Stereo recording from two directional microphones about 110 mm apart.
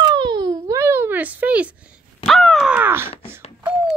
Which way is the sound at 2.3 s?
5° left (ahead or behind).